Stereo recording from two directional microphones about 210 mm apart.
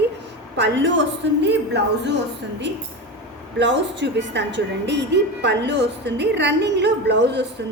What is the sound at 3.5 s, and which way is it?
A woman's voice, 60° right (ahead or behind).